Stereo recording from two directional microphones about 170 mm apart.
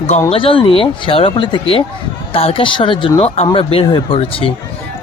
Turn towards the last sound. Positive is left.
turn(degrees=30)  # may be behind; listen again after turning